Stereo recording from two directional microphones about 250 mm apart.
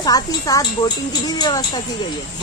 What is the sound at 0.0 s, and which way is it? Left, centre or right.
Speech, centre.